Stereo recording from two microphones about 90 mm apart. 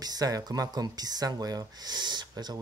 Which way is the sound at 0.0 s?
45° right (ahead or behind).